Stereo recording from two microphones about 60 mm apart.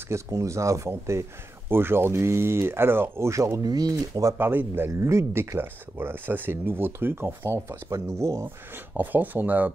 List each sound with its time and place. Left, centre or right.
0.1 s speech: right
4.4 s speech: right
5.0 s speech: right
8.7 s speech: right